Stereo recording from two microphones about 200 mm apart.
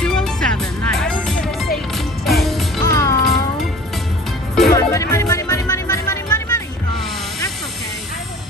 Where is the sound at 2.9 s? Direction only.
15° left (ahead or behind).